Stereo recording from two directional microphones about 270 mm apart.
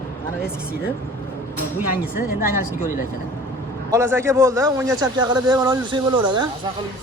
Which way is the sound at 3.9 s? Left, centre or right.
Centre.